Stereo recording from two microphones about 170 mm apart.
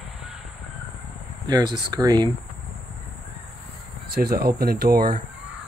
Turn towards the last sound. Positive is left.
turn(degrees=-55)  # may be behind; listen again after turning